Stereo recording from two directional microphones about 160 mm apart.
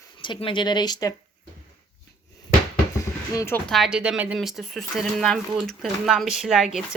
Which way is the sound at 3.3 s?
20° left (ahead or behind).